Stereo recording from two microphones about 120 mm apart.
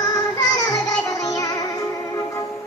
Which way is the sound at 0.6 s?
35° left (ahead or behind).